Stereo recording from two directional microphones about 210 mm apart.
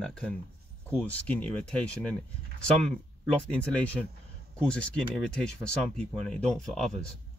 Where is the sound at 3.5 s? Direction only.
5° left (ahead or behind).